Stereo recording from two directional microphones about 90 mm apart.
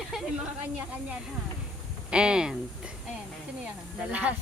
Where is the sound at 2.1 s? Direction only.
10° right (ahead or behind).